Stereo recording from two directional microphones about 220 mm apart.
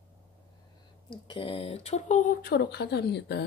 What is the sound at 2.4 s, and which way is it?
Speech, 50° left (ahead or behind).